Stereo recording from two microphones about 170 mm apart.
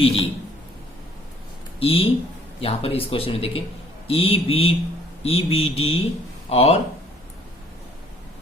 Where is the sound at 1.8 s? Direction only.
35° left (ahead or behind).